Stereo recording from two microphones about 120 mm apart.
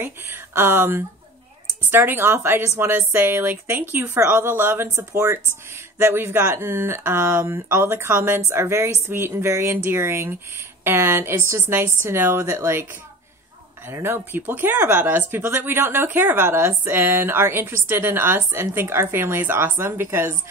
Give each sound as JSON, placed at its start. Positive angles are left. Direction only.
{"t": 0.0, "sound": "speech", "side_deg": -20}
{"t": 13.8, "sound": "speech", "side_deg": -20}